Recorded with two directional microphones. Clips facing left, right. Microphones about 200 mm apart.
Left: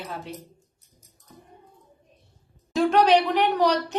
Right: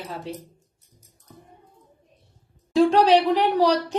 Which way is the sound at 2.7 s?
30° right (ahead or behind).